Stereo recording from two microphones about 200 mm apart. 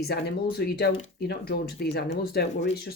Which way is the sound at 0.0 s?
55° left (ahead or behind).